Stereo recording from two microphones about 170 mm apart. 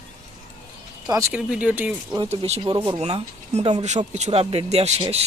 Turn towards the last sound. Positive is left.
turn(degrees=-40)  # may be behind; listen again after turning